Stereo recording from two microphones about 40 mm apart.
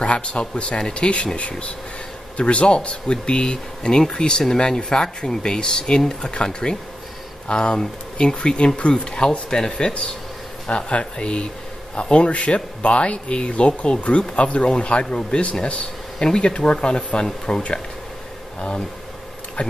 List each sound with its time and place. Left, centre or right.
0.0 s speech: left
19.6 s speech: left